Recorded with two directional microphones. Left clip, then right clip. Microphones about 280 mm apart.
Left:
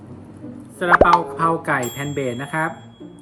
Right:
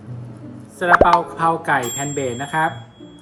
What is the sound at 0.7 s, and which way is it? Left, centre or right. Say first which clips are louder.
Speech: right 1 dB; centre.